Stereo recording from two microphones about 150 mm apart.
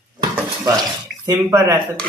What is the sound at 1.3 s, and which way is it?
Speech, 20° right (ahead or behind).